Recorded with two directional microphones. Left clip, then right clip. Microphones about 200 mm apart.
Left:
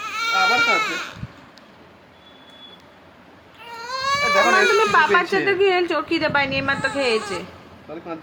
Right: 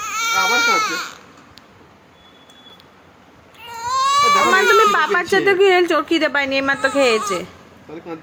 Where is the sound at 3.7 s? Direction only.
15° right (ahead or behind).